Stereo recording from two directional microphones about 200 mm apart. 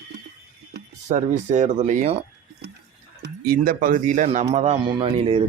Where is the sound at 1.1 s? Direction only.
35° right (ahead or behind).